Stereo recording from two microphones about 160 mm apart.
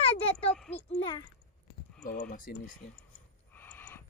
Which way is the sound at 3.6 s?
10° left (ahead or behind).